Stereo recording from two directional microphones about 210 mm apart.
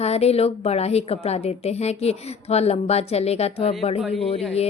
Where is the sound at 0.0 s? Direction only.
30° left (ahead or behind).